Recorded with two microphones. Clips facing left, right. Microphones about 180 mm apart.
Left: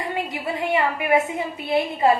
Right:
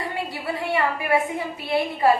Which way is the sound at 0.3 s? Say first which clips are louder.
Left 2 dB; 20° left (ahead or behind).